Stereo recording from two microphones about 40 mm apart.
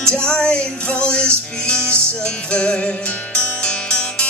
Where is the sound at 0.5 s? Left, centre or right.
Left.